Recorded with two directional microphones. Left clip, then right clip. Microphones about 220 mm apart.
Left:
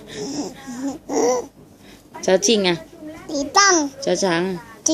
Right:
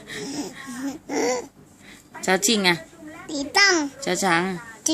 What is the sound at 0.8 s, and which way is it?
Babbling, 10° right (ahead or behind).